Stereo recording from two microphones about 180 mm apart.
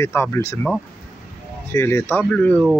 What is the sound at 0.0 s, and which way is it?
Speech, 15° left (ahead or behind).